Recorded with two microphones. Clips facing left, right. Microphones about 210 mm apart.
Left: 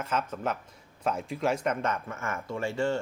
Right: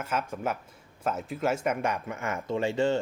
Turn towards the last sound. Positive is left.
turn(degrees=-20)  # may be behind; listen again after turning